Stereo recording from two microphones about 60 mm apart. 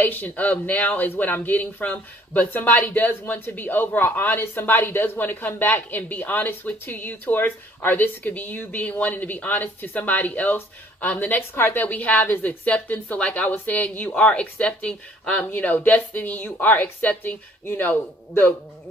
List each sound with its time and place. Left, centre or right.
0.0 s speech: left
15.5 s speech: left